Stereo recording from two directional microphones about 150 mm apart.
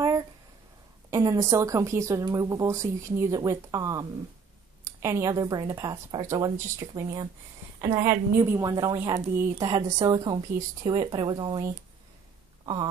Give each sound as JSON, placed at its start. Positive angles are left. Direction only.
{"t": 1.1, "sound": "speech", "side_deg": -20}